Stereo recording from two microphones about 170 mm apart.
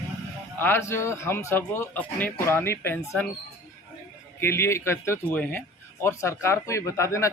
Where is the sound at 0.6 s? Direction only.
15° left (ahead or behind).